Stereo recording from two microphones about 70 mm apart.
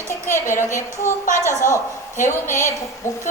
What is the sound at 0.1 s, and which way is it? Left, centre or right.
A woman's voice, left.